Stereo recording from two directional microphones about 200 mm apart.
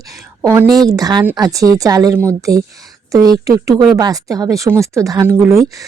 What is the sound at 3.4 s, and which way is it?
Speech, 15° right (ahead or behind).